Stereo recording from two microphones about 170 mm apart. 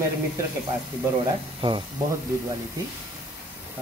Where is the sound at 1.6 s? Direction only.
30° right (ahead or behind).